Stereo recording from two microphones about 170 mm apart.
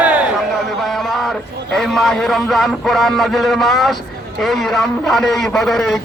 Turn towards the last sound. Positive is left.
turn(degrees=0)  # may be behind; listen again after turning